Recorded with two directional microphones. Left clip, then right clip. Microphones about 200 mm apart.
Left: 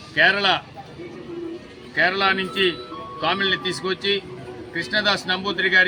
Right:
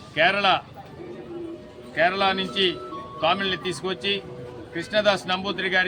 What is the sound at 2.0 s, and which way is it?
Speech, 5° right (ahead or behind).